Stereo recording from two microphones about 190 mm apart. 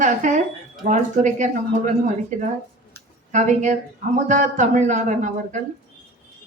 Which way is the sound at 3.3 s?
40° right (ahead or behind).